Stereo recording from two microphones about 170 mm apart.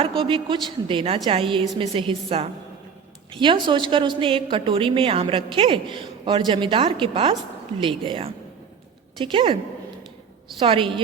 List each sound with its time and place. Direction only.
0.0 s a woman's voice: 30° right (ahead or behind)
10.6 s a woman's voice: 30° right (ahead or behind)